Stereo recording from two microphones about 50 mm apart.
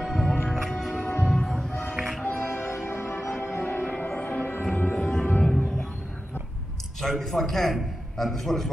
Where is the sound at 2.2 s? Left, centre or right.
Left.